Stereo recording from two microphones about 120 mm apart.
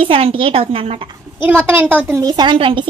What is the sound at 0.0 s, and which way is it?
A woman's voice, 50° right (ahead or behind).